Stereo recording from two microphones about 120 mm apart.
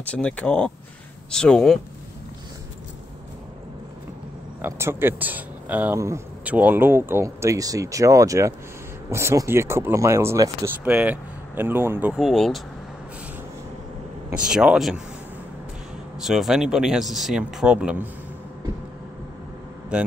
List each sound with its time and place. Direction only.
0.0 s speech: 10° left (ahead or behind)
4.6 s speech: 20° right (ahead or behind)
5.9 s speech: 25° right (ahead or behind)
6.4 s speech: 15° right (ahead or behind)
10.8 s speech: 10° right (ahead or behind)
12.1 s speech: centre (ahead or behind)
14.3 s speech: 5° right (ahead or behind)
16.2 s speech: 5° right (ahead or behind)
19.9 s speech: 10° right (ahead or behind)